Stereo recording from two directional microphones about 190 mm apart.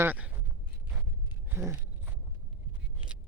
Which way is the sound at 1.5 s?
10° right (ahead or behind).